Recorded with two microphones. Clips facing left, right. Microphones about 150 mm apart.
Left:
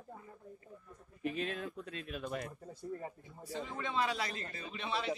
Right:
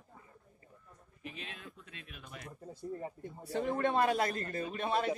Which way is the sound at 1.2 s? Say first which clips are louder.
Left 10 dB; 45° left (ahead or behind).